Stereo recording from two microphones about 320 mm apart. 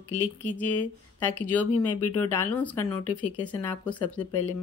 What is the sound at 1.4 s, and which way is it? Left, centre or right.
Speech, centre.